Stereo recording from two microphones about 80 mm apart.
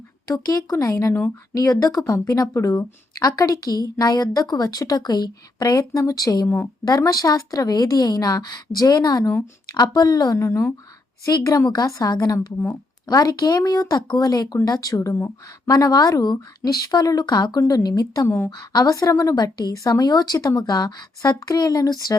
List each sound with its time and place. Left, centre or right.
0.3 s speech: left
9.7 s a woman's voice: left
10.3 s speech: left
11.3 s a woman's voice: left
17.6 s speech: left
18.3 s a woman's voice: left
18.5 s a woman's voice: left
18.9 s speech: left
19.4 s a woman's voice: left
21.2 s speech: left